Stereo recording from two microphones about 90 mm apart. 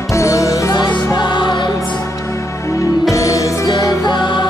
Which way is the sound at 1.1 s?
55° left (ahead or behind).